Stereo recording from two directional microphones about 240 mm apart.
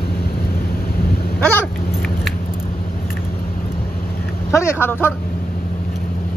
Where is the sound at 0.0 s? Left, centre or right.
Left.